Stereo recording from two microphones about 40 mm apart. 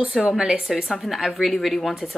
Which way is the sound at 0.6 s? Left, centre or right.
Centre.